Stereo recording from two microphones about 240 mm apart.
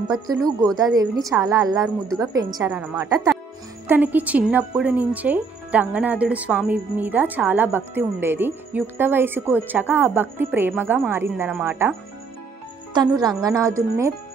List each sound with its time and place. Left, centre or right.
0.1 s speech: centre
12.9 s speech: centre